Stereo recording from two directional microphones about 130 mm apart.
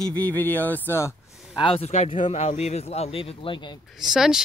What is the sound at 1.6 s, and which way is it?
Speech, 45° left (ahead or behind).